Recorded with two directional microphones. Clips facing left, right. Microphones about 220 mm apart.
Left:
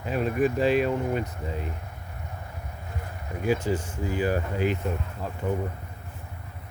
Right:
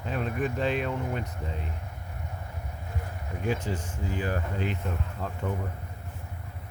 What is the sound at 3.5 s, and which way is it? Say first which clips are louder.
Speech: left 5 dB; 5° left (ahead or behind).